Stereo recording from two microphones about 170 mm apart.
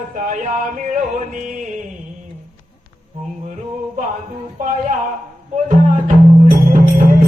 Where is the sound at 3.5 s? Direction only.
45° right (ahead or behind).